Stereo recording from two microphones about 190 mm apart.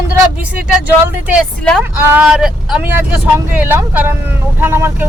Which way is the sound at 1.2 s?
Centre (ahead or behind).